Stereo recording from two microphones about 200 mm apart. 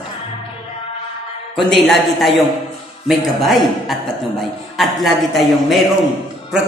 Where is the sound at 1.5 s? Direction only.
Centre (ahead or behind).